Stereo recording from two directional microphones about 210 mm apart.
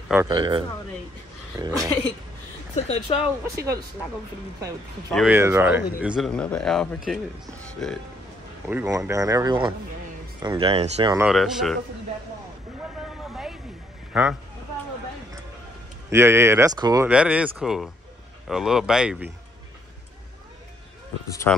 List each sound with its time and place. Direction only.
0.1 s speech: 15° right (ahead or behind)
2.7 s speech: 30° left (ahead or behind)
3.5 s speech: 15° right (ahead or behind)
5.1 s speech: 5° right (ahead or behind)
8.6 s speech: 10° right (ahead or behind)
11.2 s speech: centre (ahead or behind)
13.2 s a sound: centre (ahead or behind)
14.1 s speech: 5° right (ahead or behind)
16.1 s speech: 10° right (ahead or behind)
17.1 s speech: 5° right (ahead or behind)
21.5 s speech: 10° left (ahead or behind)